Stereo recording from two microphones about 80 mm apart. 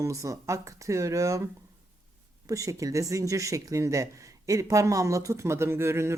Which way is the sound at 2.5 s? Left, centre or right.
Right.